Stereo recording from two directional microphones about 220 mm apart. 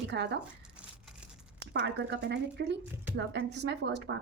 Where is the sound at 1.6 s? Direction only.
50° right (ahead or behind).